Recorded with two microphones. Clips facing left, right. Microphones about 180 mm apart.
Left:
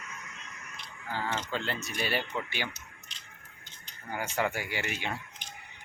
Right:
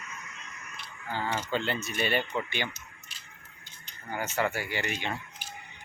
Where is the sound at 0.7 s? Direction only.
10° right (ahead or behind).